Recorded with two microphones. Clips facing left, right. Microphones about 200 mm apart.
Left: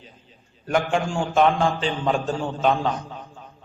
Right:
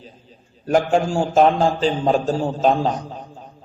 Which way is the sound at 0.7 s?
40° right (ahead or behind).